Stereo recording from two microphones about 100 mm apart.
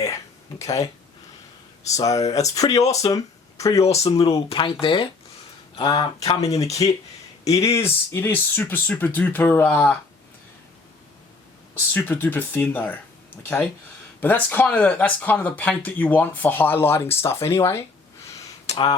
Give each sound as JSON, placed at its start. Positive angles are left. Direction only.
{"t": 0.6, "sound": "speech", "side_deg": 35}
{"t": 2.0, "sound": "speech", "side_deg": 35}
{"t": 4.2, "sound": "speech", "side_deg": 85}
{"t": 4.5, "sound": "speech", "side_deg": 60}
{"t": 6.8, "sound": "speech", "side_deg": 55}
{"t": 7.4, "sound": "speech", "side_deg": 30}
{"t": 11.9, "sound": "speech", "side_deg": 20}
{"t": 18.7, "sound": "speech", "side_deg": 90}